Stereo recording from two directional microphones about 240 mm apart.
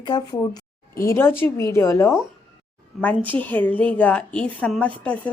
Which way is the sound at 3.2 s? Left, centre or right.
Centre.